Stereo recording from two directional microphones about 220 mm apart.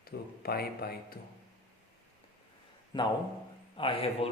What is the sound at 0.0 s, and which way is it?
Speech, 45° left (ahead or behind).